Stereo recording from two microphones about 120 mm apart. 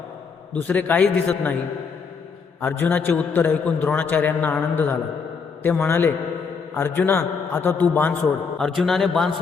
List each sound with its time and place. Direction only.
0.5 s a man's voice: 15° left (ahead or behind)
2.6 s a man's voice: 10° left (ahead or behind)